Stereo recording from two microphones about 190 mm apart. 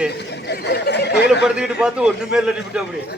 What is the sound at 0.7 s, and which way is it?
Speech, 60° left (ahead or behind).